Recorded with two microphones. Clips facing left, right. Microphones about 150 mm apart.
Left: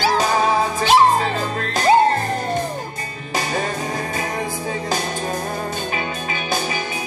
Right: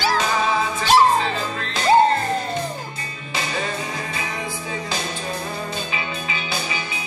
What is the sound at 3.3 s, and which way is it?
Music, 45° left (ahead or behind).